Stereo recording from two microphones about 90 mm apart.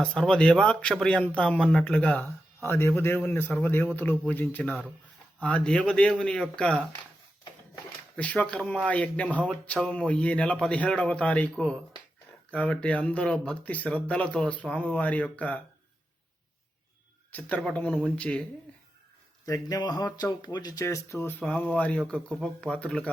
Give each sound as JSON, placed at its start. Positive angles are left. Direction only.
{"t": 0.0, "sound": "speech", "side_deg": 5}
{"t": 8.1, "sound": "speech", "side_deg": 15}
{"t": 17.3, "sound": "speech", "side_deg": 15}
{"t": 19.5, "sound": "speech", "side_deg": 40}
{"t": 19.8, "sound": "speech", "side_deg": 50}
{"t": 20.8, "sound": "speech", "side_deg": 30}